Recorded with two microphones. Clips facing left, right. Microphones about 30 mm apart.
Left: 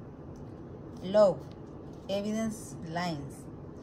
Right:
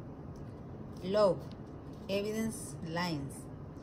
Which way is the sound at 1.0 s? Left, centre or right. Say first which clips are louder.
Left 5 dB; centre.